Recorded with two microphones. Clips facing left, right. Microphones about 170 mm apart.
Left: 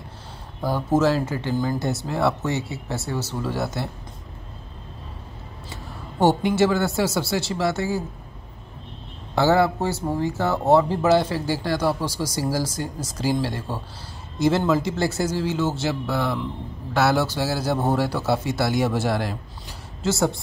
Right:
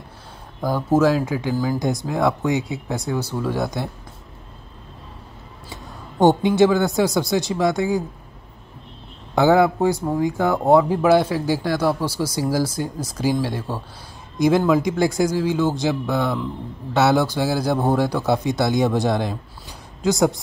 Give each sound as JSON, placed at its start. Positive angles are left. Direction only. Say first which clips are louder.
{"t": 0.6, "sound": "speech", "louder": "right 2 dB", "side_deg": 10}
{"t": 0.8, "sound": "speech", "louder": "right 3 dB", "side_deg": -10}
{"t": 1.8, "sound": "speech", "louder": "right 2 dB", "side_deg": -15}
{"t": 5.9, "sound": "speech", "louder": "right 3 dB", "side_deg": -20}
{"t": 9.3, "sound": "speech", "louder": "right 3 dB", "side_deg": -15}
{"t": 14.7, "sound": "speech", "louder": "right 4 dB", "side_deg": -15}